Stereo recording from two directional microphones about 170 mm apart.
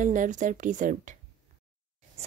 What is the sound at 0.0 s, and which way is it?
Speech, 50° right (ahead or behind).